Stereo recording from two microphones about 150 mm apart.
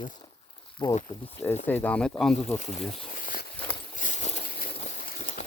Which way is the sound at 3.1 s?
65° left (ahead or behind).